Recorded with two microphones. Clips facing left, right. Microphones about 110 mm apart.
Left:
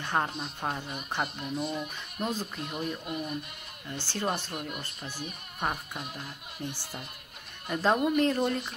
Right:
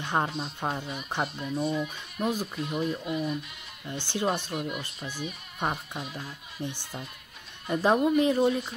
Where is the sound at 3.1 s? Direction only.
55° left (ahead or behind).